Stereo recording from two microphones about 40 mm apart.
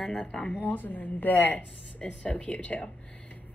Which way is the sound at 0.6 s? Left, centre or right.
Left.